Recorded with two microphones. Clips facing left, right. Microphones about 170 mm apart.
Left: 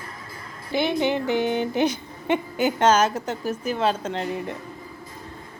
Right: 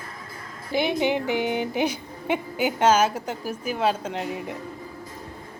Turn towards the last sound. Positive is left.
turn(degrees=-10)  # may be behind; listen again after turning